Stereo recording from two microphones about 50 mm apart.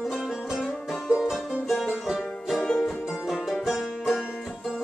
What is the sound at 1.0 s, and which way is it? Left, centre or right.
Music, centre.